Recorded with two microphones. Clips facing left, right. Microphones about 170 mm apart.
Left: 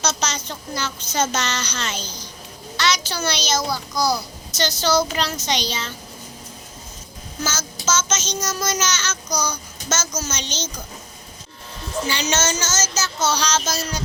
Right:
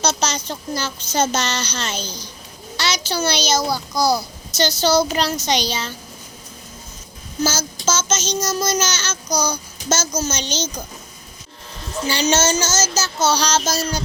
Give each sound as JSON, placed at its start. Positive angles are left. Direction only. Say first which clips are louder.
{"t": 0.0, "sound": "a child's voice", "louder": "right 3 dB", "side_deg": -35}
{"t": 7.4, "sound": "a child's voice", "louder": "right 4 dB", "side_deg": -35}
{"t": 12.0, "sound": "a child's voice", "louder": "right 6 dB", "side_deg": -30}